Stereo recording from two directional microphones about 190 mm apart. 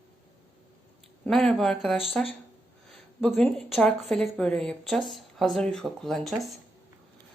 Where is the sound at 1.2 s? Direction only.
5° left (ahead or behind).